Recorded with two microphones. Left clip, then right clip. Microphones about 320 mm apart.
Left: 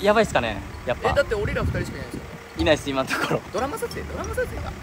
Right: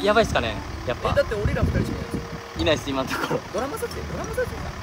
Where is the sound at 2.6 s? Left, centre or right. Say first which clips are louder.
Left 2 dB; left.